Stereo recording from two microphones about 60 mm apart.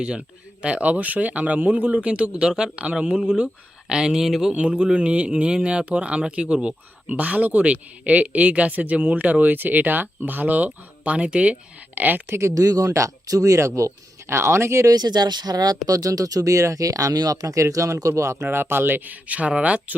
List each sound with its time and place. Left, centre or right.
0.0 s speech: centre
2.5 s speech: centre
2.7 s speech: centre
4.5 s speech: right
11.9 s speech: right
12.3 s speech: right
12.5 s speech: right
12.9 s speech: right
15.1 s speech: right
15.4 s speech: right
15.9 s speech: right
18.4 s speech: right
19.3 s speech: right